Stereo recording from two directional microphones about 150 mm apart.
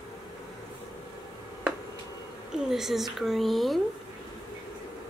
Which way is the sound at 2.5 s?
5° right (ahead or behind).